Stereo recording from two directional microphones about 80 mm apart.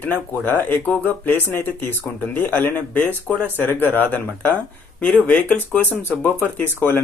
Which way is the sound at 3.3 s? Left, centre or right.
Centre.